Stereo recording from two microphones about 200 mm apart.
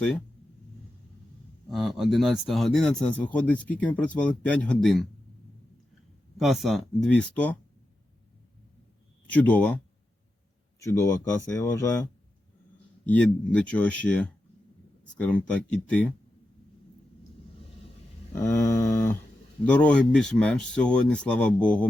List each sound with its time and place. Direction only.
1.7 s speech: centre (ahead or behind)
6.3 s speech: centre (ahead or behind)
9.3 s speech: 5° left (ahead or behind)
13.1 s speech: 5° left (ahead or behind)
18.3 s speech: 15° left (ahead or behind)